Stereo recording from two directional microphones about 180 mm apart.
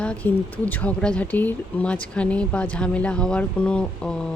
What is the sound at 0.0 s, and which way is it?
Speech, 5° left (ahead or behind).